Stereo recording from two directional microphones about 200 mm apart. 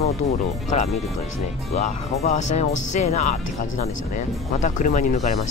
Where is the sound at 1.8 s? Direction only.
35° left (ahead or behind).